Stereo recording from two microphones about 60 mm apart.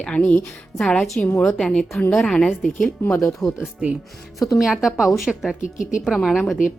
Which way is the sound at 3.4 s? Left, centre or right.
Centre.